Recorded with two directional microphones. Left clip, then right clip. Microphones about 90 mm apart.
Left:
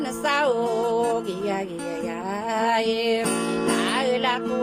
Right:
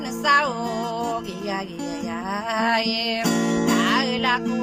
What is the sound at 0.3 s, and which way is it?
Music, 35° left (ahead or behind).